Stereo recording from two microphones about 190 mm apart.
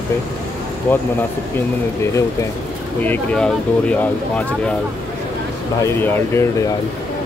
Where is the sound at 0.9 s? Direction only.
10° left (ahead or behind).